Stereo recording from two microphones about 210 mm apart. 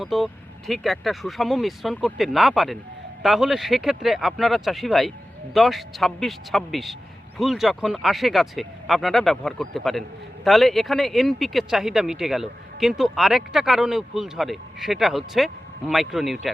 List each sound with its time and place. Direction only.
0.0 s speech: centre (ahead or behind)